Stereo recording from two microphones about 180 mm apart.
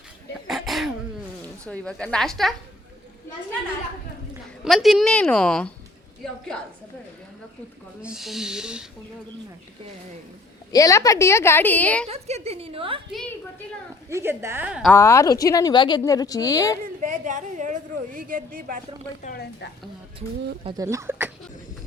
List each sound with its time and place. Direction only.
0.4 s throat clearing: centre (ahead or behind)
1.6 s a woman's voice: 5° left (ahead or behind)
4.6 s a woman's voice: centre (ahead or behind)
8.0 s a woman's voice: centre (ahead or behind)
10.7 s a woman's voice: 20° left (ahead or behind)
12.0 s a woman's voice: 35° right (ahead or behind)
14.1 s a woman's voice: 15° right (ahead or behind)
14.9 s speech: 15° left (ahead or behind)
17.0 s a woman's voice: 45° right (ahead or behind)
19.2 s speech: 55° left (ahead or behind)
20.7 s a woman's voice: 15° right (ahead or behind)